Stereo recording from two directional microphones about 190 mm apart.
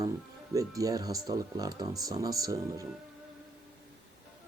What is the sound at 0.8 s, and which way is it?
Speech, 20° right (ahead or behind).